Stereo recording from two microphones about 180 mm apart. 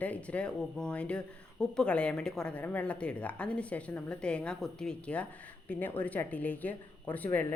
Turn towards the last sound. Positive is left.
turn(degrees=10)  # may be behind; listen again after turning